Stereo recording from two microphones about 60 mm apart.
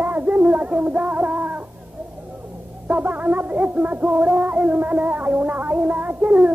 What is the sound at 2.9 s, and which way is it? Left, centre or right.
Speech, right.